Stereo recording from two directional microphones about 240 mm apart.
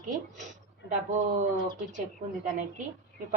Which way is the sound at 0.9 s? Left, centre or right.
Right.